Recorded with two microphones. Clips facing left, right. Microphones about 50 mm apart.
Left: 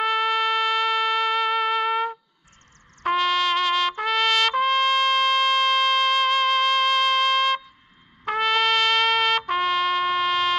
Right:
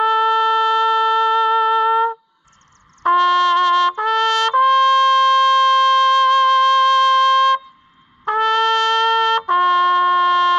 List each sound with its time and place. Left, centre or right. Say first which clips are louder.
0.0 s music: right 7 dB; left
3.2 s trumpet: right 8 dB; right
4.6 s trumpet: right 8 dB; left
5.5 s a sound: right 7 dB; left
6.2 s flute: right 8 dB; right
6.9 s music: right 7 dB; left
8.4 s trumpet: right 5 dB; right